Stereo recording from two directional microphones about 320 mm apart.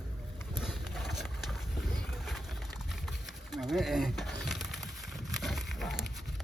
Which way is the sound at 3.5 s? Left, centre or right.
Centre.